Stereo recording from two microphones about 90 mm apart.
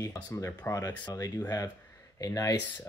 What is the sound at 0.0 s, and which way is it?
Speech, 35° left (ahead or behind).